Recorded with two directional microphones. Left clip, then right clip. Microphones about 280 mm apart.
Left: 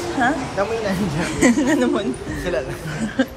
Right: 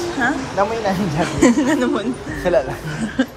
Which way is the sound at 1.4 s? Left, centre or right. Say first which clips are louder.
Right 1 dB; centre.